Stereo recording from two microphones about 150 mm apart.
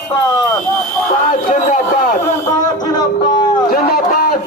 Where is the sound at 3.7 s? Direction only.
90° left.